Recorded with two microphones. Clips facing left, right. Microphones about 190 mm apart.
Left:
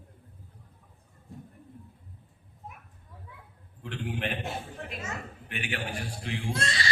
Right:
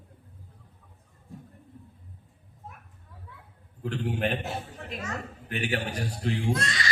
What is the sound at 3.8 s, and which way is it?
Speech, 40° right (ahead or behind).